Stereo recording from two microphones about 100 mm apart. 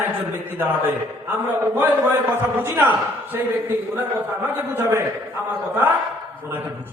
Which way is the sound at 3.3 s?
20° right (ahead or behind).